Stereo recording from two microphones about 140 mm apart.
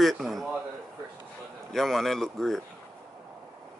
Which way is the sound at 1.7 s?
Centre (ahead or behind).